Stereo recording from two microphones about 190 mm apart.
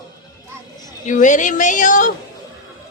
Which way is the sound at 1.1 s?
40° left (ahead or behind).